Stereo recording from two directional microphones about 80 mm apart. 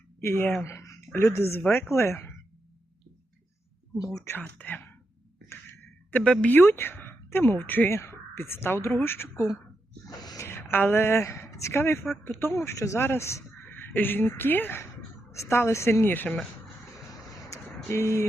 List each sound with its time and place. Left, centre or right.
0.6 s a woman's voice: left
3.9 s speech: left
4.2 s a woman's voice: left
6.1 s speech: centre
6.5 s speech: left
6.9 s a sound: left
7.3 s a woman's voice: left
10.1 s gasp: left
10.4 s speech: left
15.3 s a woman's voice: left
17.8 s a woman's voice: left